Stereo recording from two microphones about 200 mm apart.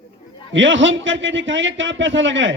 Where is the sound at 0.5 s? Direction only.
70° right (ahead or behind).